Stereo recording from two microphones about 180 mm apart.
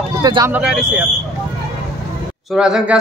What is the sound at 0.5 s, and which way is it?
Speech, 10° right (ahead or behind).